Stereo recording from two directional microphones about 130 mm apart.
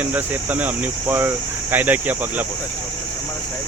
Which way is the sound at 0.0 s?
10° right (ahead or behind).